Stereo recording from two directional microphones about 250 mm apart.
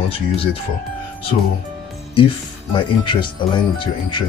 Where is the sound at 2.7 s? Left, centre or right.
Centre.